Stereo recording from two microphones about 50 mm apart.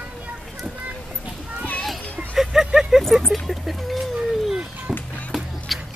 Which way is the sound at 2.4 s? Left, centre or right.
Centre.